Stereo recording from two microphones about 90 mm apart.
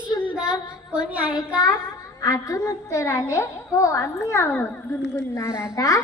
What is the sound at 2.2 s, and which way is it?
A woman's voice, 40° left (ahead or behind).